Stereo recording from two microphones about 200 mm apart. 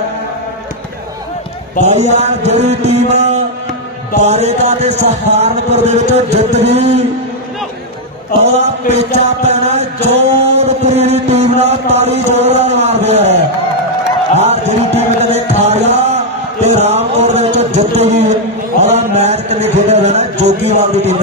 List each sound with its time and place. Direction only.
1.9 s speech: 30° right (ahead or behind)
8.5 s music: 35° right (ahead or behind)
16.6 s a sound: 35° right (ahead or behind)